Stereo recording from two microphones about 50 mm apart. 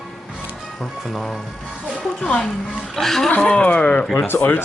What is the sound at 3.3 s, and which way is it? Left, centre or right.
Speech, left.